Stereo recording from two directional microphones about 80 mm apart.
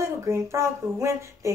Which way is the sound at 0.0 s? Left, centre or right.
Right.